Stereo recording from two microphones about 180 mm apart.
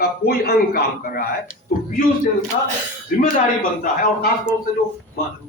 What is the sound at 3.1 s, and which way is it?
A man's voice, 50° left (ahead or behind).